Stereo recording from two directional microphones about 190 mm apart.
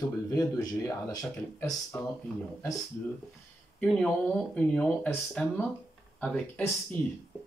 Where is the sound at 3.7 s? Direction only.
5° left (ahead or behind).